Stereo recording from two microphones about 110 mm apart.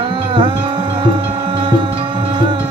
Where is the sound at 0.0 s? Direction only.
50° right (ahead or behind).